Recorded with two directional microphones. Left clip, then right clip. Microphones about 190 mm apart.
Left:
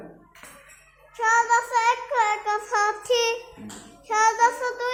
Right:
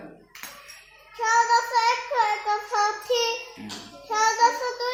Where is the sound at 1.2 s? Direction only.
5° left (ahead or behind).